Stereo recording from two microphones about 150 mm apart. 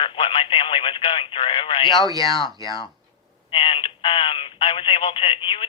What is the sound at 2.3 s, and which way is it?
Speech, centre (ahead or behind).